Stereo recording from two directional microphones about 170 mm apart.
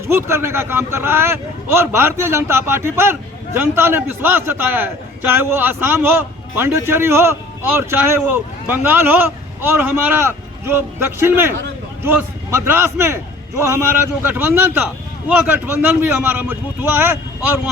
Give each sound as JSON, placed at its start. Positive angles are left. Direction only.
{"t": 0.1, "sound": "a man's voice", "side_deg": -15}